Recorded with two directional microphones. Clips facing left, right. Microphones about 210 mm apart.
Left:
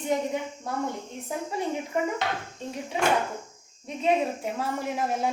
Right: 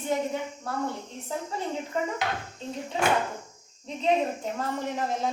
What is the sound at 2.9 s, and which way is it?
A woman's voice, 15° left (ahead or behind).